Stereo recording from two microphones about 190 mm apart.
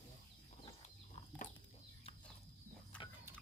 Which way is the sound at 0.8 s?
35° left (ahead or behind).